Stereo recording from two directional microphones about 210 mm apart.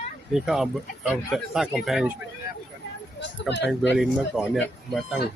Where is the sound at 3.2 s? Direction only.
55° left (ahead or behind).